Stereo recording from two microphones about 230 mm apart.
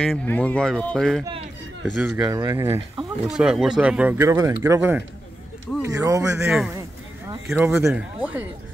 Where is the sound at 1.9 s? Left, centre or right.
Centre.